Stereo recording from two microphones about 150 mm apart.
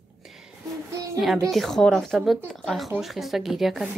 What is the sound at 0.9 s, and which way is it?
Speech, 20° right (ahead or behind).